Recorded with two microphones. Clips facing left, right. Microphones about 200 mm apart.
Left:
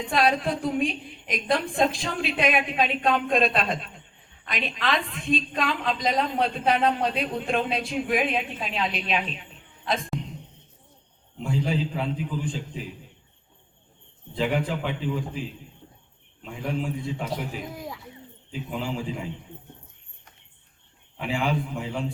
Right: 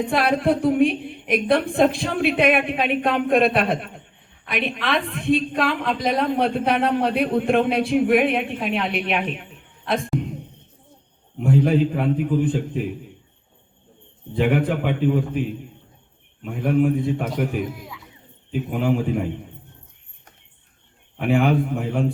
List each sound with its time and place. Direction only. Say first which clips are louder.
0.0 s a woman's voice: right 4 dB; 60° right (ahead or behind)
11.3 s a woman's voice: right 9 dB; 60° right (ahead or behind)
14.3 s a woman's voice: right 6 dB; 60° right (ahead or behind)
21.2 s a woman's voice: right 8 dB; 60° right (ahead or behind)